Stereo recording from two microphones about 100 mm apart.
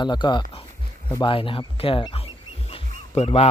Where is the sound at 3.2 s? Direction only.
90° left.